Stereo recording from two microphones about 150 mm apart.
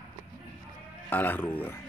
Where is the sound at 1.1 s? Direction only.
10° left (ahead or behind).